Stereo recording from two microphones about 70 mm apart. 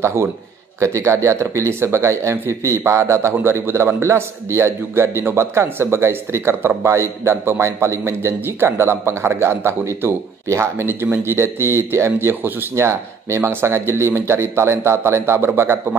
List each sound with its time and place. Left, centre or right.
0.0 s a man's voice: right